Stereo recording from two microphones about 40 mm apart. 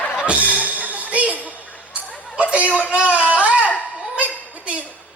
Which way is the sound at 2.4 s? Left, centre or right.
Right.